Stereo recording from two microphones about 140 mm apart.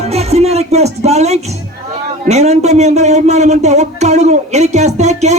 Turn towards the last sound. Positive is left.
turn(degrees=-55)  # may be behind; listen again after turning